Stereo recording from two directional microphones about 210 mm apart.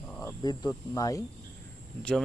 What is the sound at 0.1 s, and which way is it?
Speech, 15° left (ahead or behind).